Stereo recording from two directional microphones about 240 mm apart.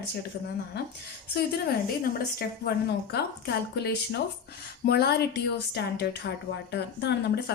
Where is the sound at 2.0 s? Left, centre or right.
Left.